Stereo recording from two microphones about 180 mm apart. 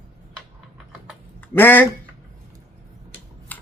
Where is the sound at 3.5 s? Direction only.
10° left (ahead or behind).